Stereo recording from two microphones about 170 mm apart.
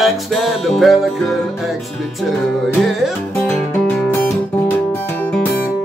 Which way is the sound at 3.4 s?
10° left (ahead or behind).